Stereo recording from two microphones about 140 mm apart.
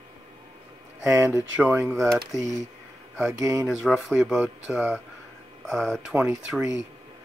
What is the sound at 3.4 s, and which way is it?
Speech, 20° right (ahead or behind).